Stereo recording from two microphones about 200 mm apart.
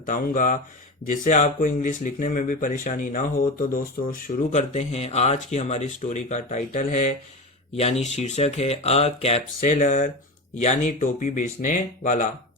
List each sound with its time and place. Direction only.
0.0 s speech: 40° left (ahead or behind)